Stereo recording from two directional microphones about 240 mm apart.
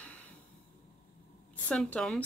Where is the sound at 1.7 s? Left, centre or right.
Centre.